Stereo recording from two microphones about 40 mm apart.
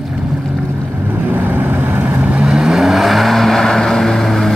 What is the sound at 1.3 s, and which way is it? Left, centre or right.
Vehicle, right.